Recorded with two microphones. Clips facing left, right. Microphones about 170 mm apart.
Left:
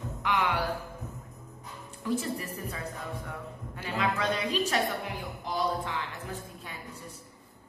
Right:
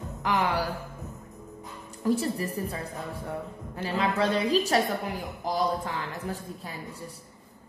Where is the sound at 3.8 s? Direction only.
30° right (ahead or behind).